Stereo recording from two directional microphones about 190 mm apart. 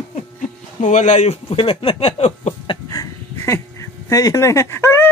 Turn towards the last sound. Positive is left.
turn(degrees=15)  # may be behind; listen again after turning